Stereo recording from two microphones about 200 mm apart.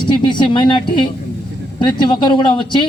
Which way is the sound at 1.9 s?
25° left (ahead or behind).